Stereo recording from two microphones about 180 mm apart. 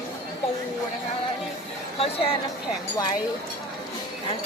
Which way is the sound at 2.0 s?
35° left (ahead or behind).